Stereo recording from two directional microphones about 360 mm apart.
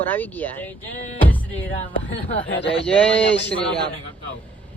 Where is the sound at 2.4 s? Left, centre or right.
Left.